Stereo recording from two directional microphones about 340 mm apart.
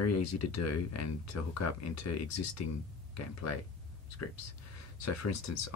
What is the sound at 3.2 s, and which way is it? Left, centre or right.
Speech, left.